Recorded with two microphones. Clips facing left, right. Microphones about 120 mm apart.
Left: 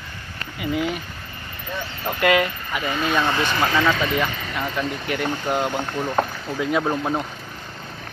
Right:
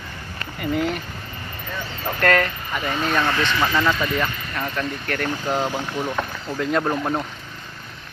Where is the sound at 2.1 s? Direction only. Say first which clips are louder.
Left 1 dB; 10° left (ahead or behind).